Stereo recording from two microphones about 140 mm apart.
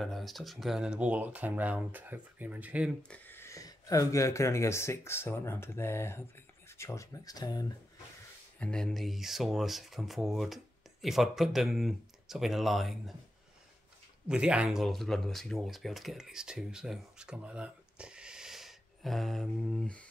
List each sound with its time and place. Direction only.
0.0 s speech: centre (ahead or behind)
3.0 s speech: 10° left (ahead or behind); by 7.7 s 25° left (ahead or behind)
8.5 s speech: 5° left (ahead or behind)
14.2 s speech: 5° right (ahead or behind)